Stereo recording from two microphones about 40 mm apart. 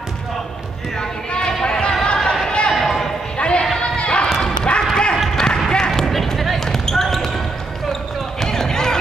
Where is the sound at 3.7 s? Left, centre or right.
Left.